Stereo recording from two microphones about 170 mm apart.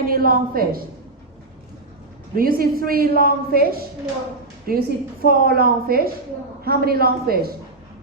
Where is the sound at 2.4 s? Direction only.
60° right (ahead or behind).